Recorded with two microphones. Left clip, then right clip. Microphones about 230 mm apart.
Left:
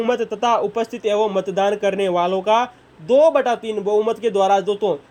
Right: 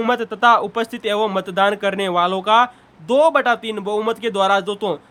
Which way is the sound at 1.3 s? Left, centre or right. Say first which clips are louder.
Left 1 dB; right.